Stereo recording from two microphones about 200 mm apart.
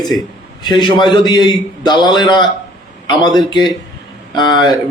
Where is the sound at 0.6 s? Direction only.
20° left (ahead or behind).